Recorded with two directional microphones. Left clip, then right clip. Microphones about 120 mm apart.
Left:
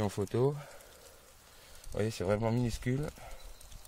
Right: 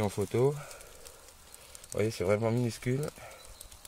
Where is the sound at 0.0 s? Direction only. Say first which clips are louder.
Right 3 dB; 25° left (ahead or behind).